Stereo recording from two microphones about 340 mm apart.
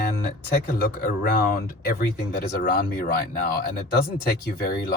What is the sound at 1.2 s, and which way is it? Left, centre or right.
Speech, left.